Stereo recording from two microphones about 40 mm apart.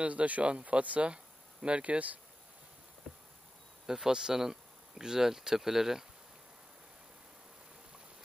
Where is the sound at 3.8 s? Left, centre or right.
Centre.